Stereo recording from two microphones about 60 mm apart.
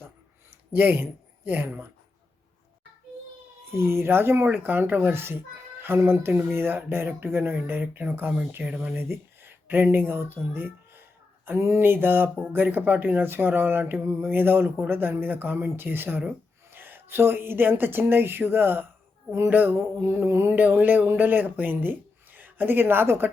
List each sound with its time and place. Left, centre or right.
0.7 s speech: right
3.8 s speech: right
4.4 s speech: right
8.6 s speech: centre
9.0 s speech: right
20.7 s speech: right